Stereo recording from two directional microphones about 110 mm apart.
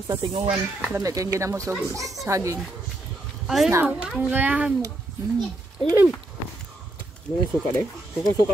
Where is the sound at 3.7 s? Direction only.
20° right (ahead or behind).